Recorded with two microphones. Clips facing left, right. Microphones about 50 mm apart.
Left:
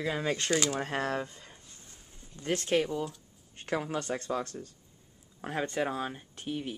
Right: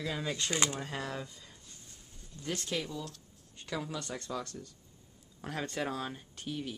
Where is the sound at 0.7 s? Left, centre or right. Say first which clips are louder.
Left 7 dB; left.